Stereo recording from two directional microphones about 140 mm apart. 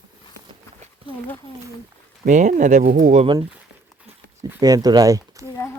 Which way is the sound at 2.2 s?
65° right (ahead or behind).